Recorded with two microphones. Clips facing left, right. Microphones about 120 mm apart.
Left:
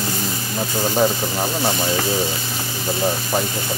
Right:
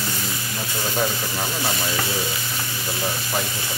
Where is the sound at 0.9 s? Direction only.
30° left (ahead or behind).